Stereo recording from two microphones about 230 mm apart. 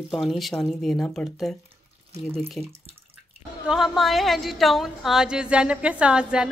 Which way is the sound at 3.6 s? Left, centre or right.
Centre.